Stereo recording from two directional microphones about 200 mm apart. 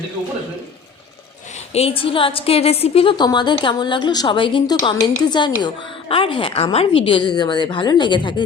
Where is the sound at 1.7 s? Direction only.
30° left (ahead or behind).